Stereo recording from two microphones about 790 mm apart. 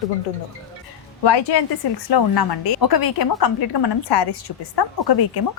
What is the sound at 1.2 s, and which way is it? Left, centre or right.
A woman's voice, left.